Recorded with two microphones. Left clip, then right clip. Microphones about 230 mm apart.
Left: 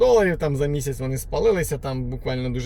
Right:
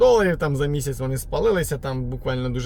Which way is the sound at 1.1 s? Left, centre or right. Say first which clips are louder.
Left 1 dB; right.